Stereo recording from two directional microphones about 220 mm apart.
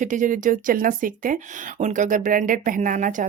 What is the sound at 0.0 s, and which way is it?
Speech, 35° right (ahead or behind).